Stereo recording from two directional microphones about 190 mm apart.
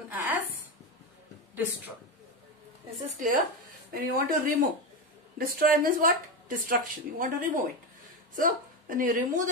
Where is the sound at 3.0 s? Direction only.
40° right (ahead or behind).